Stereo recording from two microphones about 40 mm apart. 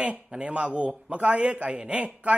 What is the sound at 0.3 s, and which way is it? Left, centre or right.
A man's voice, right.